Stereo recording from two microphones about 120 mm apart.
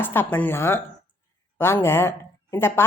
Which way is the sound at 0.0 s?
15° left (ahead or behind).